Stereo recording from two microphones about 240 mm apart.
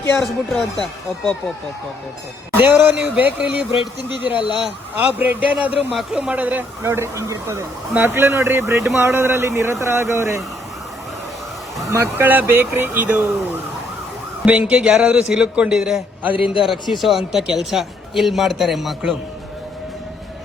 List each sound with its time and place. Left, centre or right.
0.0 s a man's voice: centre
2.5 s a man's voice: centre
11.9 s speech: centre
14.4 s a man's voice: centre
16.3 s a man's voice: left
16.6 s a man's voice: centre